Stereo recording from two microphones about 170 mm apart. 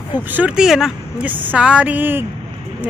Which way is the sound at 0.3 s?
5° right (ahead or behind).